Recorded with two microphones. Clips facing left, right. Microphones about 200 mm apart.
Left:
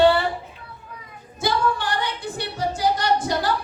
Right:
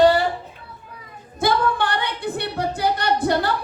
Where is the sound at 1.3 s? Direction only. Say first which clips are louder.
Right 3 dB; 60° right (ahead or behind).